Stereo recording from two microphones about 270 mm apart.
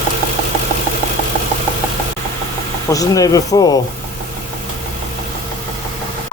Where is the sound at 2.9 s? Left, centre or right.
Centre.